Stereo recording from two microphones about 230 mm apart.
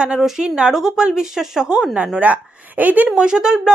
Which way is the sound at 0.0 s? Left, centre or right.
Centre.